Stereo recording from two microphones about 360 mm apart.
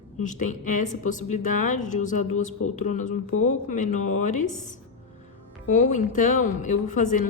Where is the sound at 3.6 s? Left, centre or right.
Centre.